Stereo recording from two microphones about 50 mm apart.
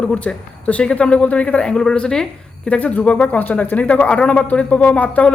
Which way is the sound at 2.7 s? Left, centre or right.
Left.